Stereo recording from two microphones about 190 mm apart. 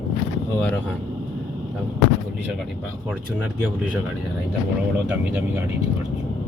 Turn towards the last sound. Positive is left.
turn(degrees=-10)  # may be behind; listen again after turning